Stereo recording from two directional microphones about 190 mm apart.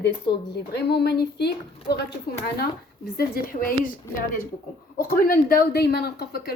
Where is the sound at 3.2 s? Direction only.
50° left (ahead or behind).